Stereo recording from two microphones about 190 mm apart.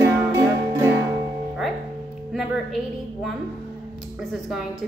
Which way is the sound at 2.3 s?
Centre (ahead or behind).